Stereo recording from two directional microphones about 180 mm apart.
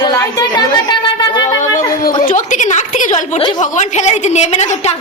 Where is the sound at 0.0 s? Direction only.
20° left (ahead or behind).